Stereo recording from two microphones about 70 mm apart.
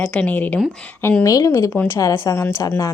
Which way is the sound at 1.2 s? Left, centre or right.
Left.